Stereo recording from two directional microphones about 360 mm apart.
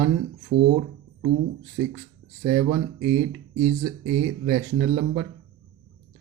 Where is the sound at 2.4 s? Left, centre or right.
Centre.